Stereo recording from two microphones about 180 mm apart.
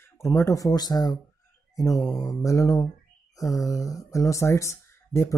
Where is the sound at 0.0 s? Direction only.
15° left (ahead or behind).